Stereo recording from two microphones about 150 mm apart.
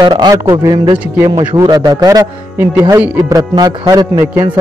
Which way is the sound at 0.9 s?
10° right (ahead or behind).